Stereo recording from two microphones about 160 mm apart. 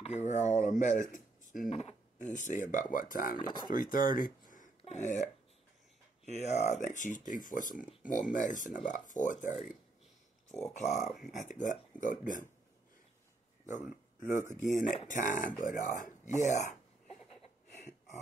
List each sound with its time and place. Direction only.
0.0 s speech: 45° left (ahead or behind)
1.1 s a sound: 55° left (ahead or behind)
1.7 s speech: 45° left (ahead or behind); by 3.3 s 60° left (ahead or behind)
3.3 s speech: 25° left (ahead or behind)
3.7 s speech: 60° left (ahead or behind)
6.2 s speech: 45° left (ahead or behind)
11.0 s speech: centre (ahead or behind)
11.3 s speech: 50° left (ahead or behind)
14.5 s speech: 50° left (ahead or behind)